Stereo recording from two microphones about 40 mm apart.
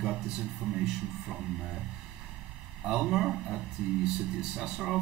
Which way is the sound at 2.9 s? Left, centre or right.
Centre.